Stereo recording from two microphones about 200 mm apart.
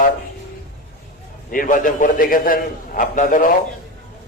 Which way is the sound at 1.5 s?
45° left (ahead or behind).